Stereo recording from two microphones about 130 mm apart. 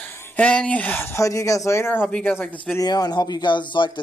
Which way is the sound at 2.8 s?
30° left (ahead or behind).